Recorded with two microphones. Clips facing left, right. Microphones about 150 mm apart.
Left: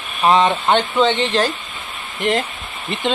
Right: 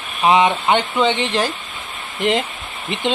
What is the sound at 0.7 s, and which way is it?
Speech, 10° right (ahead or behind).